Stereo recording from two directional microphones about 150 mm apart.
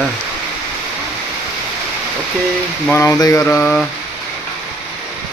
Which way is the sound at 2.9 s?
15° left (ahead or behind).